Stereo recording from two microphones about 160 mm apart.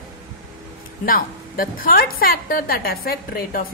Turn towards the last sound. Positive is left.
turn(degrees=65)  # may be behind; listen again after turning